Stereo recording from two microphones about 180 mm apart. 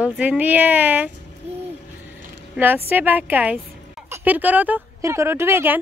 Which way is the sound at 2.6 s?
10° right (ahead or behind).